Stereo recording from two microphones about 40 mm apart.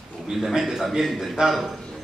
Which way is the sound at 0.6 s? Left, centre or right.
Centre.